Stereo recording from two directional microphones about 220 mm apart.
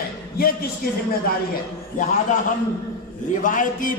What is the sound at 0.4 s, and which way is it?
Speech, 40° left (ahead or behind).